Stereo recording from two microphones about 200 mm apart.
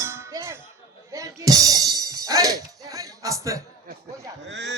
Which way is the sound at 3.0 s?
15° right (ahead or behind).